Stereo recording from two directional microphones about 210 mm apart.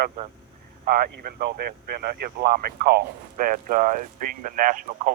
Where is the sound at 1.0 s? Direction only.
50° right (ahead or behind).